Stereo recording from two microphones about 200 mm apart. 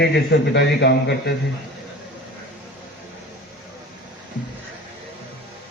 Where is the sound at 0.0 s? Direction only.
60° left (ahead or behind).